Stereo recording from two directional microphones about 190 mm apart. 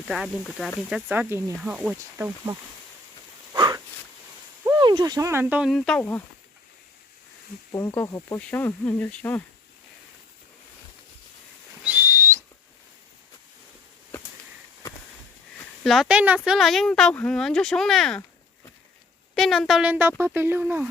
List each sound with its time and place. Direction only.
0.1 s speech: centre (ahead or behind)
3.5 s a sound: 20° right (ahead or behind)
4.6 s speech: 20° right (ahead or behind); by 6.2 s 10° left (ahead or behind)
7.7 s speech: 15° left (ahead or behind)
11.8 s whistling: 10° right (ahead or behind)
15.8 s speech: centre (ahead or behind)
19.3 s speech: centre (ahead or behind)